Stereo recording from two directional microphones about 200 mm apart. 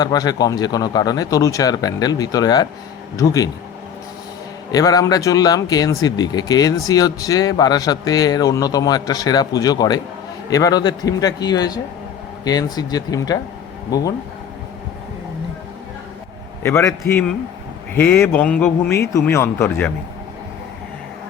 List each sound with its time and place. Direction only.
0.0 s a man's voice: 20° left (ahead or behind)
4.7 s speech: 20° left (ahead or behind)
16.6 s a man's voice: 10° left (ahead or behind)